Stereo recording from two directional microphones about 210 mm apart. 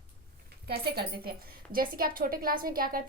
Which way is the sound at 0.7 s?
45° right (ahead or behind).